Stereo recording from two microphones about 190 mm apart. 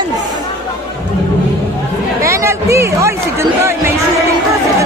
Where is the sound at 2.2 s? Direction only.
15° right (ahead or behind).